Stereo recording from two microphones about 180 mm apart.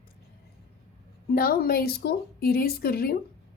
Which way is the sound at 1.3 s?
55° left (ahead or behind).